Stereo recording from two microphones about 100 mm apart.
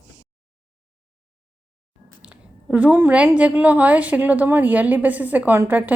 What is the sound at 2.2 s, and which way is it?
A woman's voice, 15° right (ahead or behind).